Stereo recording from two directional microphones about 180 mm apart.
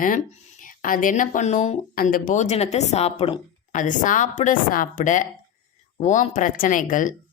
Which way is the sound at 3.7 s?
45° left (ahead or behind).